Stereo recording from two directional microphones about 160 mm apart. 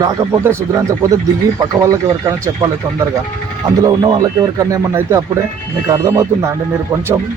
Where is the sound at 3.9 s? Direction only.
25° right (ahead or behind).